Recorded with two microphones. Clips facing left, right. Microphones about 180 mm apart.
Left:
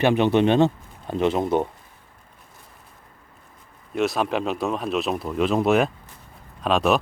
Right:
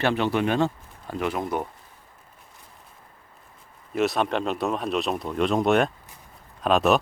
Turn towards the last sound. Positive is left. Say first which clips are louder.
# even
turn(degrees=0)  # may be behind; listen again after turning